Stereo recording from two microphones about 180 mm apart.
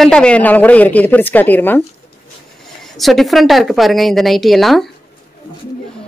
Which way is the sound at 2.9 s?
Centre (ahead or behind).